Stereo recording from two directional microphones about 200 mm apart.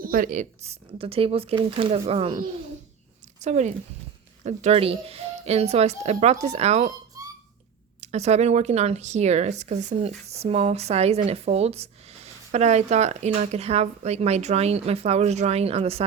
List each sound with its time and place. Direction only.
0.0 s speech: 45° right (ahead or behind); by 2.4 s 30° right (ahead or behind)
3.4 s speech: 35° right (ahead or behind)
8.0 s speech: 35° right (ahead or behind)